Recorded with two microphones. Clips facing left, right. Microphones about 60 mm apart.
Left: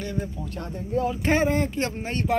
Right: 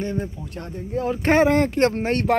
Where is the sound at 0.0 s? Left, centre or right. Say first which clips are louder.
Right 4 dB; right.